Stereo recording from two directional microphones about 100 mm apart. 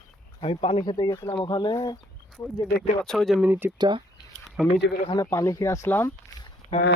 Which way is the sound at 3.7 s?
50° right (ahead or behind).